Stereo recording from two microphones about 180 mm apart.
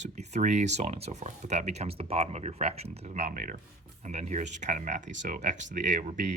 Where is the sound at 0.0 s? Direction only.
40° right (ahead or behind).